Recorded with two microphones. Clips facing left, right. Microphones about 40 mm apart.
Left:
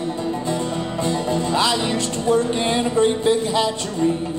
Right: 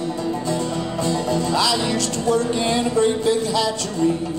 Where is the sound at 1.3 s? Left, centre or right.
Left.